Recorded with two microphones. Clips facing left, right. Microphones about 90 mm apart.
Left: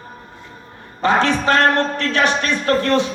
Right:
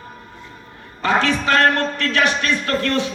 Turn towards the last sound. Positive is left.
turn(degrees=20)  # may be behind; listen again after turning